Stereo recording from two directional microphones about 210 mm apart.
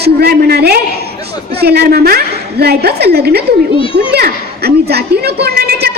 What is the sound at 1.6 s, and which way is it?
Speech, 50° right (ahead or behind).